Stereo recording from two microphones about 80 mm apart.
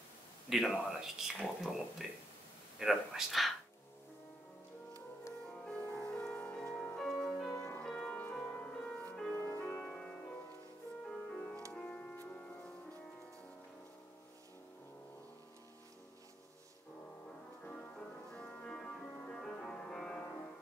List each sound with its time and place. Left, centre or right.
0.5 s speech: centre
5.5 s music: centre
17.6 s music: centre